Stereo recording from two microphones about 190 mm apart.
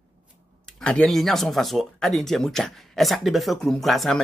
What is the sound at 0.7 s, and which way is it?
Speech, 5° left (ahead or behind).